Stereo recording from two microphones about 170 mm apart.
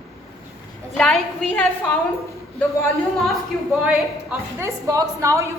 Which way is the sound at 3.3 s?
5° right (ahead or behind).